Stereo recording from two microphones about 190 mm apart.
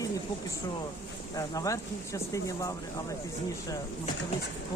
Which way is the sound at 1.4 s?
15° left (ahead or behind).